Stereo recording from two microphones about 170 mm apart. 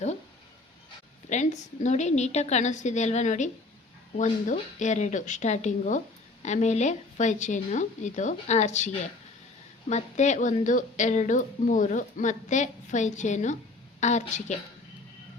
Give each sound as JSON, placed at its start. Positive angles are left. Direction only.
{"t": 1.3, "sound": "a woman's voice", "side_deg": 45}